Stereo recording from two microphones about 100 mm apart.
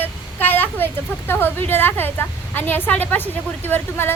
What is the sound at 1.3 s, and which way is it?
A woman's voice, 20° left (ahead or behind).